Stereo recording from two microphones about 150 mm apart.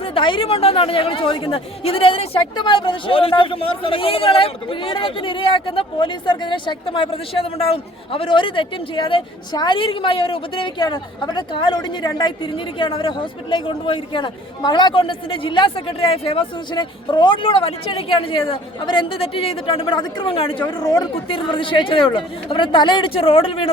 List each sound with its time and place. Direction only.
0.0 s speech: 35° left (ahead or behind)